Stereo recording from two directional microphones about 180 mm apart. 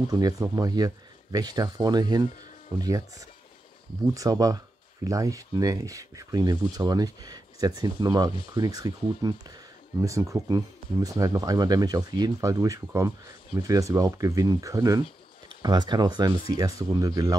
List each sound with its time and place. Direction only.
0.1 s speech: 20° right (ahead or behind)